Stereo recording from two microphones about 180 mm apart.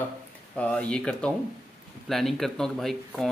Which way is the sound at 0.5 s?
5° left (ahead or behind).